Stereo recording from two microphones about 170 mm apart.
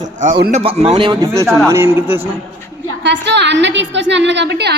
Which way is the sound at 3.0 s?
90° right.